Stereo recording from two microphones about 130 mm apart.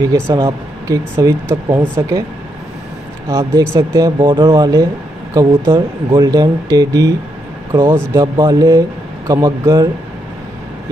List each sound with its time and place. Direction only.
0.0 s speech: 25° right (ahead or behind)
3.3 s speech: 20° right (ahead or behind)
4.2 s speech: 40° right (ahead or behind)
4.5 s speech: 25° right (ahead or behind)
8.4 s speech: 30° right (ahead or behind)